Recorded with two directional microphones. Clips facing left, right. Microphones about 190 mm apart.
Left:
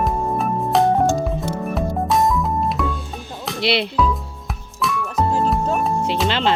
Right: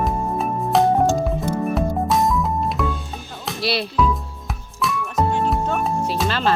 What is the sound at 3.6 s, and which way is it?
Speech, 20° left (ahead or behind).